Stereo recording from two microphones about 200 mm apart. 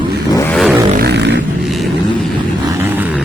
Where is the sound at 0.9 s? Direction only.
55° right (ahead or behind).